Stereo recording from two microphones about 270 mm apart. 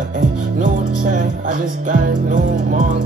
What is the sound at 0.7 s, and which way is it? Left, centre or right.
Music, right.